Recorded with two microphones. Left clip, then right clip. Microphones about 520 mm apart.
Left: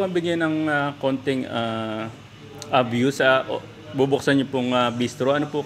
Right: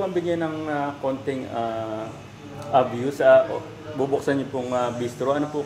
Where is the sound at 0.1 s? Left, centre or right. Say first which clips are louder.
Left 2 dB; left.